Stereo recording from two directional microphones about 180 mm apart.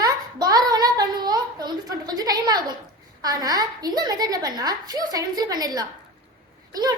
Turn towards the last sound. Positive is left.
turn(degrees=-20)  # may be behind; listen again after turning